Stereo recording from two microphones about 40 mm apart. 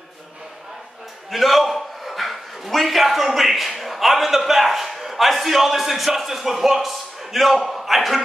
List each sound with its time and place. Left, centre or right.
1.3 s a man's voice: centre